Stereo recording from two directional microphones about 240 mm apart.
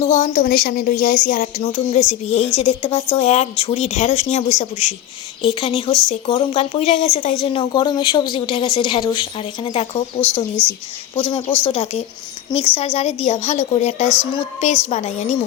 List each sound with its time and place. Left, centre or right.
0.0 s a woman's voice: left
11.1 s a woman's voice: centre